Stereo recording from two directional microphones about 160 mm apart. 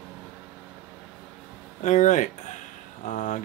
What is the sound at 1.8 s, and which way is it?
Speech, 50° left (ahead or behind).